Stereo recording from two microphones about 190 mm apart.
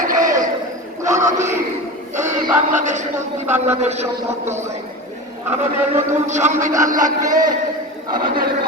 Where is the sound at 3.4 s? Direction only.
10° right (ahead or behind).